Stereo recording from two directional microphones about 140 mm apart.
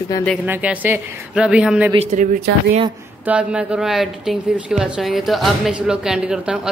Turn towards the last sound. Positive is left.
turn(degrees=-5)  # may be behind; listen again after turning